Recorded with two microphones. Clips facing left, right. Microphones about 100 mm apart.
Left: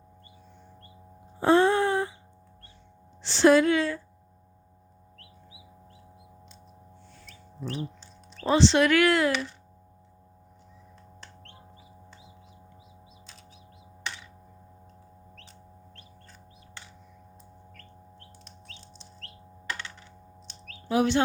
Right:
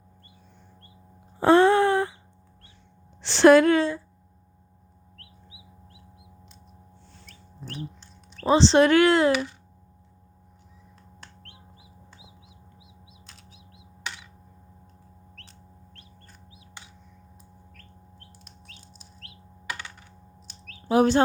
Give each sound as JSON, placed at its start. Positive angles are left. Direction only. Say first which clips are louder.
{"t": 1.4, "sound": "a sound", "louder": "right 4 dB", "side_deg": -70}
{"t": 3.2, "sound": "a woman's voice", "louder": "right 4 dB", "side_deg": -65}
{"t": 7.7, "sound": "duck", "louder": "left 2 dB", "side_deg": 0}
{"t": 8.4, "sound": "speech", "louder": "right 3 dB", "side_deg": -30}
{"t": 11.4, "sound": "chicken", "louder": "left 2 dB", "side_deg": -5}
{"t": 15.4, "sound": "chicken", "louder": "left 1 dB", "side_deg": 0}
{"t": 17.7, "sound": "bird", "louder": "left 2 dB", "side_deg": -5}
{"t": 20.5, "sound": "chirp", "louder": "right 1 dB", "side_deg": 0}
{"t": 20.9, "sound": "speech", "louder": "right 4 dB", "side_deg": -40}